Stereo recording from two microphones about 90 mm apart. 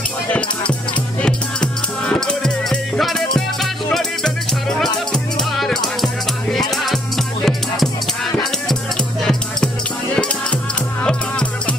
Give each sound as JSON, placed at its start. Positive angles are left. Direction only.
{"t": 0.3, "sound": "speech", "side_deg": 10}
{"t": 1.2, "sound": "music", "side_deg": 10}
{"t": 11.0, "sound": "music", "side_deg": 10}